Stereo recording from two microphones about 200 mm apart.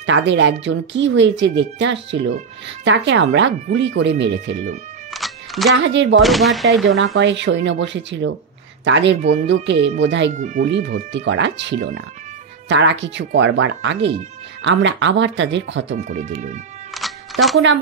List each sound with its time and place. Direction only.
0.0 s speech: 65° right (ahead or behind)
5.1 s music: centre (ahead or behind)
5.8 s speech: 65° right (ahead or behind)
6.2 s speech: centre (ahead or behind)
7.2 s speech: 65° right (ahead or behind)
9.2 s speech: 35° right (ahead or behind)
9.5 s speech: 65° right (ahead or behind)
10.3 s speech: 35° right (ahead or behind)
11.1 s speech: 65° right (ahead or behind)
16.9 s music: centre (ahead or behind)